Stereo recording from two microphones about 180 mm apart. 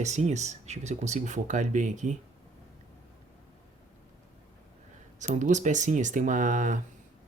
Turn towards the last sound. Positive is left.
turn(degrees=-45)  # may be behind; listen again after turning